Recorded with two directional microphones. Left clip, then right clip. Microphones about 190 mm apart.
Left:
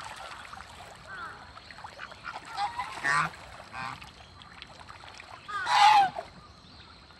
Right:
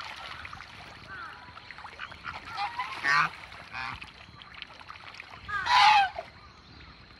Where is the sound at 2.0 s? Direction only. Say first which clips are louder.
Right 1 dB; 5° left (ahead or behind).